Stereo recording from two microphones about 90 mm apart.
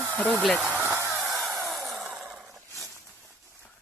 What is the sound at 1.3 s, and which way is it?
Sawing, centre (ahead or behind).